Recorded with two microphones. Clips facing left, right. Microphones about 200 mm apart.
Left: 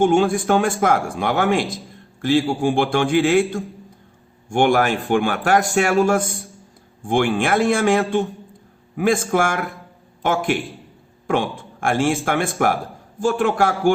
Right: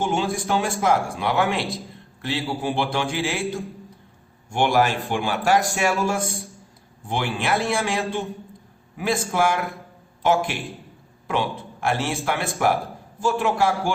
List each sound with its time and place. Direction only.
0.0 s a man's voice: 50° left (ahead or behind)
6.2 s a man's voice: centre (ahead or behind)
7.1 s a man's voice: 50° left (ahead or behind)